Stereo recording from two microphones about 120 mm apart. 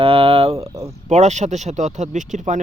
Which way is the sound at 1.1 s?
75° right (ahead or behind).